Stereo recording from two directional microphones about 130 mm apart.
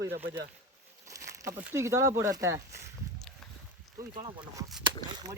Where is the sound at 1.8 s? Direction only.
20° right (ahead or behind).